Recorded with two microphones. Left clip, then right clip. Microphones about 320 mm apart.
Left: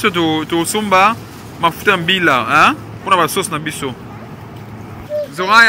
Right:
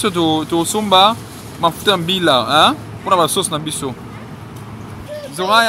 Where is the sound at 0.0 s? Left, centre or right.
Centre.